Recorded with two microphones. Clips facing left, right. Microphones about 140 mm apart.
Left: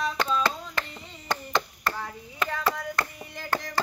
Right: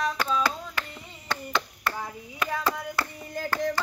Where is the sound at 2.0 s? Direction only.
10° right (ahead or behind).